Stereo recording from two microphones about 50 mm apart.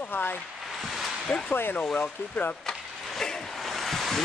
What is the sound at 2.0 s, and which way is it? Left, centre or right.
Speech, left.